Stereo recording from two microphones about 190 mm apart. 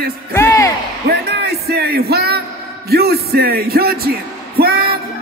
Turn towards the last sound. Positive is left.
turn(degrees=-55)  # may be behind; listen again after turning